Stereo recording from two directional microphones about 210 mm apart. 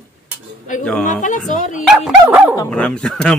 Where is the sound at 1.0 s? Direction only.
35° left (ahead or behind).